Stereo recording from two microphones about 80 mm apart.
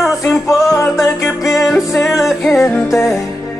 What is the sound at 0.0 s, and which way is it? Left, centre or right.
Music, centre.